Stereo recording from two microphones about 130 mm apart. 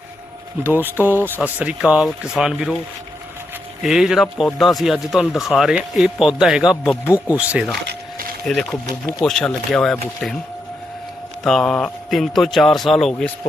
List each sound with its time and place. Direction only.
0.6 s speech: 15° right (ahead or behind)
3.8 s speech: 5° right (ahead or behind)
7.0 s speech: 20° left (ahead or behind)
7.3 s speech: 10° right (ahead or behind)
8.4 s speech: 5° left (ahead or behind)
11.4 s speech: 5° left (ahead or behind)